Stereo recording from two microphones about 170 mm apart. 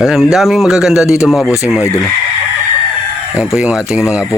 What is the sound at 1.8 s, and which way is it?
Speech, 15° left (ahead or behind).